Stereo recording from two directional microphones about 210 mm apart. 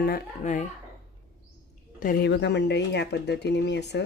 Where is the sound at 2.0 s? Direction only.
45° left (ahead or behind).